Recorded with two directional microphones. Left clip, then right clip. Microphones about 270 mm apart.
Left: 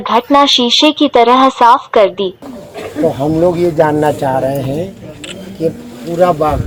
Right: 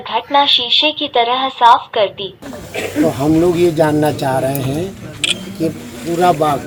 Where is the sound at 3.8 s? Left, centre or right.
Centre.